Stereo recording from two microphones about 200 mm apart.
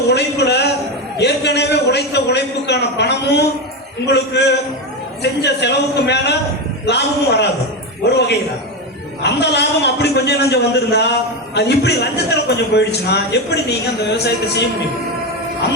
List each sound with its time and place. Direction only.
0.1 s a man's voice: 55° left (ahead or behind)
9.2 s a man's voice: 60° left (ahead or behind)